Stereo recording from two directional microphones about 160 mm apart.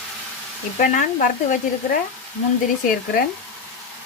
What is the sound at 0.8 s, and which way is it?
Stir, 55° left (ahead or behind).